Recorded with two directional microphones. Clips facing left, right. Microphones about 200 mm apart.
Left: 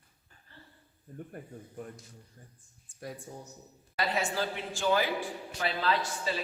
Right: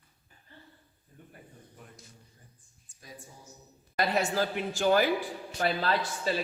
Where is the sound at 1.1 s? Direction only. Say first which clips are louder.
Left 9 dB; 50° left (ahead or behind).